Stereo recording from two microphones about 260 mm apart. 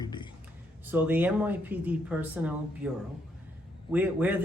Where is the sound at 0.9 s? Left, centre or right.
Centre.